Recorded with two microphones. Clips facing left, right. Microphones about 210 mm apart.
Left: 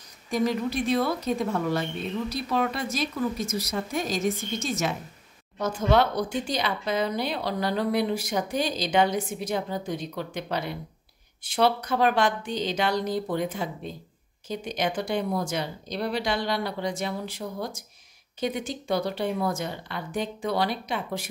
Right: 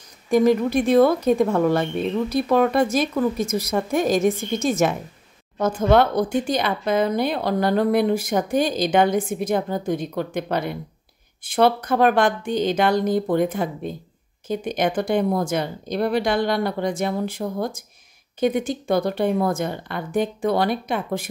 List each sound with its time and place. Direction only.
0.3 s speech: 50° right (ahead or behind)